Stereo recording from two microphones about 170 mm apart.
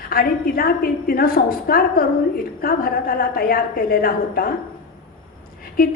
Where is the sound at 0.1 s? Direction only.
60° left (ahead or behind).